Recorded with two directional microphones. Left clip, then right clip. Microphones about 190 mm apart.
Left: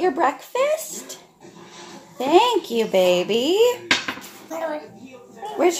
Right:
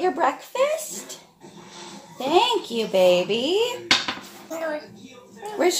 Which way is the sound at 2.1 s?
40° left (ahead or behind).